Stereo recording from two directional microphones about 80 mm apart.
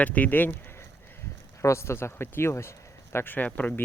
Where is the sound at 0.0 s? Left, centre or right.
Centre.